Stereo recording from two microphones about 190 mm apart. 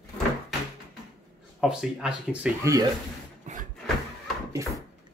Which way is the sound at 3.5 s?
40° right (ahead or behind).